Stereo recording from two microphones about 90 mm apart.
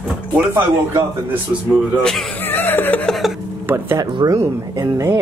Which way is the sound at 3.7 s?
20° right (ahead or behind).